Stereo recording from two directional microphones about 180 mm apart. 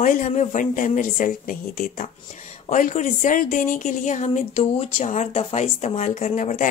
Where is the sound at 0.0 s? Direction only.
45° left (ahead or behind).